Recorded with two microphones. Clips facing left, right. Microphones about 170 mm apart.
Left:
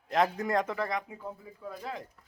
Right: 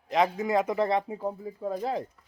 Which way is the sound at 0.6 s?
20° right (ahead or behind).